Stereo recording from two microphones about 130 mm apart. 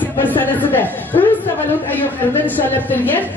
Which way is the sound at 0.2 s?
15° left (ahead or behind).